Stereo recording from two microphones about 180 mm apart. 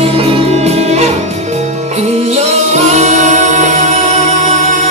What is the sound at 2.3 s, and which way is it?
Music, 40° right (ahead or behind).